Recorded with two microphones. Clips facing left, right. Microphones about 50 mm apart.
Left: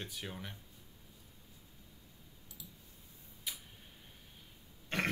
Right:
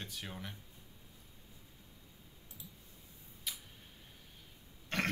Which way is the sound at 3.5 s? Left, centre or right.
Centre.